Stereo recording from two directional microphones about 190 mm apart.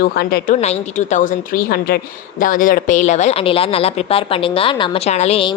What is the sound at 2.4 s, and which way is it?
Speech, 45° left (ahead or behind).